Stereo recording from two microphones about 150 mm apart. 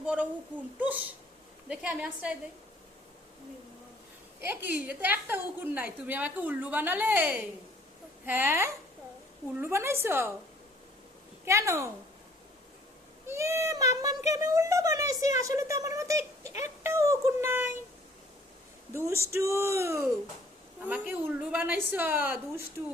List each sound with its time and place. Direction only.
0.0 s a sound: 5° right (ahead or behind)
0.8 s a woman's voice: 10° right (ahead or behind)
4.4 s a woman's voice: 15° right (ahead or behind)
11.4 s speech: 20° right (ahead or behind)
13.2 s speech: 20° right (ahead or behind)
16.5 s speech: 50° left (ahead or behind)
16.8 s a woman's voice: 20° right (ahead or behind)
18.9 s a woman's voice: 15° right (ahead or behind)